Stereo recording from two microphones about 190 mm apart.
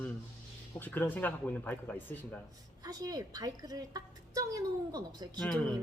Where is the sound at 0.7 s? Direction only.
10° left (ahead or behind).